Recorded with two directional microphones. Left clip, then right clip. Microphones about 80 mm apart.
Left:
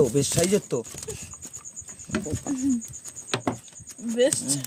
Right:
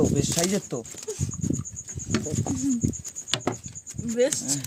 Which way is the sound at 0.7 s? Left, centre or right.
Left.